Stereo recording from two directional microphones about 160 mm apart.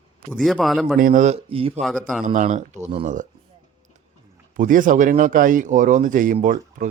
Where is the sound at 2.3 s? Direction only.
50° right (ahead or behind).